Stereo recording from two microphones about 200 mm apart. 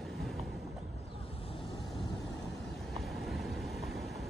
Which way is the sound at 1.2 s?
30° left (ahead or behind).